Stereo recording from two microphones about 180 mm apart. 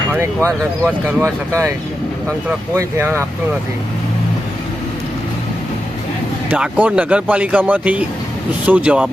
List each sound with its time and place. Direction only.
1.0 s speech: 15° right (ahead or behind)
6.5 s speech: 10° right (ahead or behind)